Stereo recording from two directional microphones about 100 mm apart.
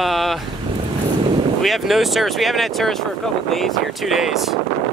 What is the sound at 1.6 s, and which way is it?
Speech, centre (ahead or behind).